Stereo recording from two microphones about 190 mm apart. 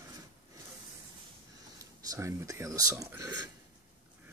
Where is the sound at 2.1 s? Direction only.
15° right (ahead or behind).